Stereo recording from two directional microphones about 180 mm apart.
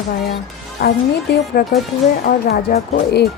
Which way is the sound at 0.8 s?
50° left (ahead or behind).